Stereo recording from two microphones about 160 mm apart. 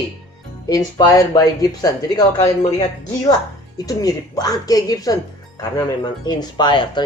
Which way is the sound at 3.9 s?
25° left (ahead or behind).